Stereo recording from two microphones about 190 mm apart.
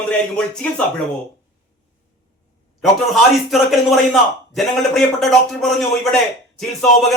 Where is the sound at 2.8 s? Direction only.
Centre (ahead or behind).